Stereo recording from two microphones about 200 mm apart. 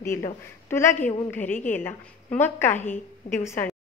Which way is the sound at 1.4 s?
40° left (ahead or behind).